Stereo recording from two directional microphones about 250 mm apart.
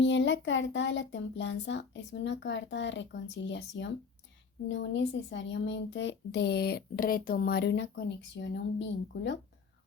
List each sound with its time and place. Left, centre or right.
0.0 s a child's voice: left